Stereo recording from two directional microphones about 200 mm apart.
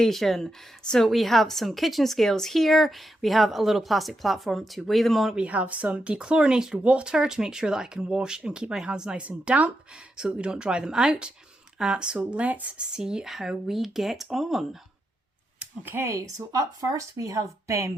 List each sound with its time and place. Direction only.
0.0 s a woman's voice: centre (ahead or behind)
15.8 s speech: 10° right (ahead or behind)